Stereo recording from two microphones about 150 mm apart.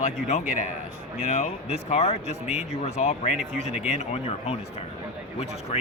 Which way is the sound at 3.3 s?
5° right (ahead or behind).